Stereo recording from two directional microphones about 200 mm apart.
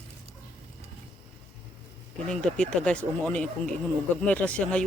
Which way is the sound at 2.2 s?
5° left (ahead or behind).